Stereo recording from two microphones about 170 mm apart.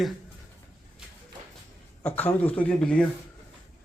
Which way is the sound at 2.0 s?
10° left (ahead or behind).